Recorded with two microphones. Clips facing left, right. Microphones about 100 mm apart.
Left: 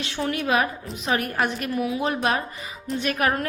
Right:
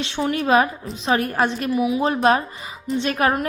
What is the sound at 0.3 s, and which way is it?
A woman's voice, 30° right (ahead or behind).